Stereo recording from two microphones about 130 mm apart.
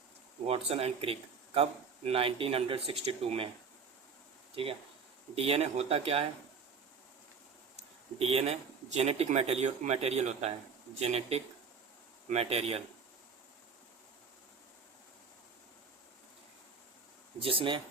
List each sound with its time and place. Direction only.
0.4 s speech: 50° right (ahead or behind)
4.5 s speech: 45° right (ahead or behind)
7.8 s speech: 50° right (ahead or behind)
17.4 s speech: 40° right (ahead or behind)